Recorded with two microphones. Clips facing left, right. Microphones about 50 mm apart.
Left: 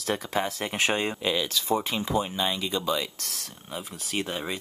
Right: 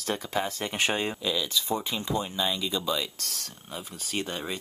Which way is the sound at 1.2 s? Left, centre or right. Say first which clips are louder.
Left 2 dB; left.